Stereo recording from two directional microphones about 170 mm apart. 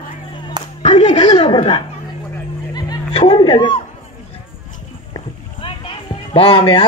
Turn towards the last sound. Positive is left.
turn(degrees=35)  # may be behind; listen again after turning